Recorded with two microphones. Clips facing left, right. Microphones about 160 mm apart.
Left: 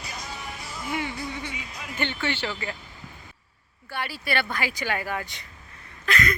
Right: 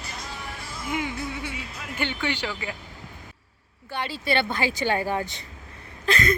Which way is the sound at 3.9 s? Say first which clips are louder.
Right 3 dB; 20° right (ahead or behind).